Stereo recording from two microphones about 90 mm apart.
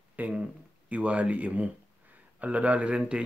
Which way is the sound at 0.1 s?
15° right (ahead or behind).